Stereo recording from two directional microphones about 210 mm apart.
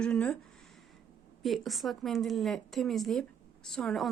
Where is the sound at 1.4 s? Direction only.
Centre (ahead or behind).